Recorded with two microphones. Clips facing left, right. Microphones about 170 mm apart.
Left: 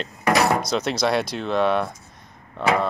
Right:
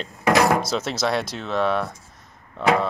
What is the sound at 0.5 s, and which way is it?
Speech, 5° right (ahead or behind).